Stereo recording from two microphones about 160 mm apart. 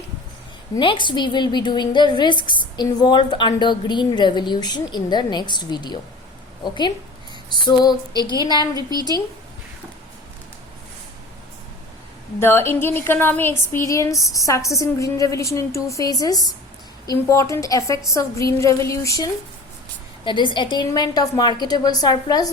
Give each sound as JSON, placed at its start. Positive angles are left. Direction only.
{"t": 0.8, "sound": "a woman's voice", "side_deg": 30}
{"t": 7.5, "sound": "a woman's voice", "side_deg": 30}
{"t": 8.7, "sound": "a woman's voice", "side_deg": -25}
{"t": 12.4, "sound": "a woman's voice", "side_deg": 15}
{"t": 20.2, "sound": "a woman's voice", "side_deg": 30}